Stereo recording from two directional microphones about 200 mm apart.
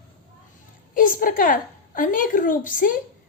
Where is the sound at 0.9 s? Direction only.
45° left (ahead or behind).